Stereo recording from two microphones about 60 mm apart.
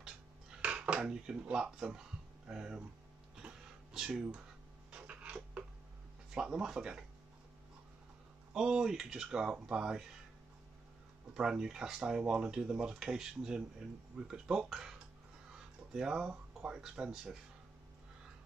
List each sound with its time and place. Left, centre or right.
0.0 s speech: centre
3.3 s a sound: centre
6.3 s speech: centre
8.5 s speech: centre
11.3 s speech: centre